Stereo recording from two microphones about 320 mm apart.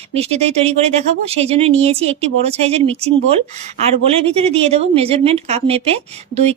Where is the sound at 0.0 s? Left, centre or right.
Centre.